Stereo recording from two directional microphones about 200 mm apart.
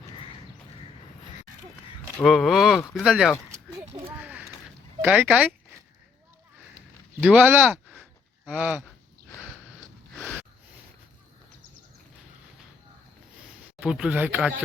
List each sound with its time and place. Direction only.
2.1 s speech: centre (ahead or behind)
3.5 s a sound: 20° right (ahead or behind)
4.2 s a sound: 5° right (ahead or behind)
5.0 s speech: 10° right (ahead or behind)
7.2 s speech: 5° right (ahead or behind)
13.8 s speech: 5° right (ahead or behind)